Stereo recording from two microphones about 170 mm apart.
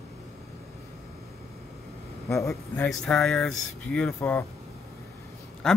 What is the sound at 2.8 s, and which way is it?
Speech, 5° left (ahead or behind).